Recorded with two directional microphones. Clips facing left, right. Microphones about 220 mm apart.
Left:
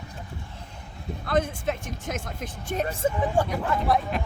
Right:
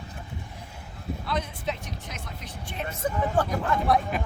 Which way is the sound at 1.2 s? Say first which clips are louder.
Left 6 dB; 50° left (ahead or behind).